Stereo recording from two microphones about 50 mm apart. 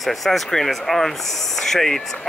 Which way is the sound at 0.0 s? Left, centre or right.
Centre.